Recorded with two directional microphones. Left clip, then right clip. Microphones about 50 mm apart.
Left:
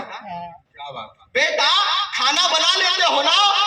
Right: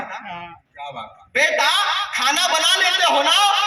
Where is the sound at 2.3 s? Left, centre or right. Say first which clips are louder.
Even; left.